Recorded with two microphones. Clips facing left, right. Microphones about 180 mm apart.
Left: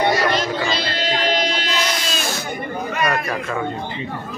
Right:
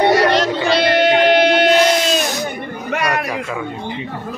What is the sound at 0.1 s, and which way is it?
Music, 70° right (ahead or behind).